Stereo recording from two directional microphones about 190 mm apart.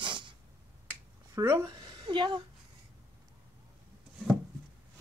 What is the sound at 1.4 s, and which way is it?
Speech, 20° right (ahead or behind).